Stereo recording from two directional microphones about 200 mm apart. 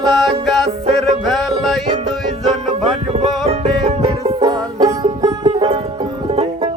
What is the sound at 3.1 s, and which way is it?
Music, 30° right (ahead or behind).